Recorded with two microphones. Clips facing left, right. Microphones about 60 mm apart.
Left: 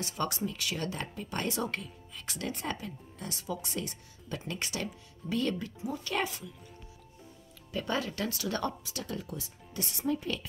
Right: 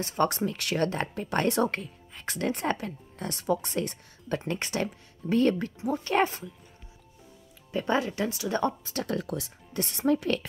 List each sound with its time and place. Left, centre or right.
0.0 s speech: right
0.4 s speech: right
7.7 s speech: right
8.8 s speech: right
9.1 s speech: right
9.8 s speech: right